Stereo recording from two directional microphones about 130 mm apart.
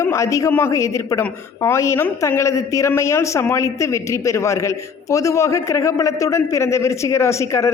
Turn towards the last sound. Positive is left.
turn(degrees=20)  # may be behind; listen again after turning